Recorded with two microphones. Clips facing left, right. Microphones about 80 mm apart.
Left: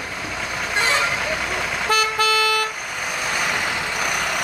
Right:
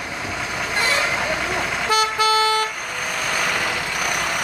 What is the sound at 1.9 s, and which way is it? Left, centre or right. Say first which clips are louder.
Vehicle: even; left.